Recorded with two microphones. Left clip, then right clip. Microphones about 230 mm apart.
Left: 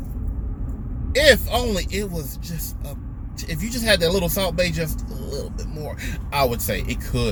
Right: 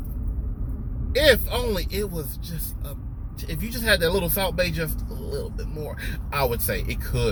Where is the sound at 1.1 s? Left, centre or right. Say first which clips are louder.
Left 3 dB; centre.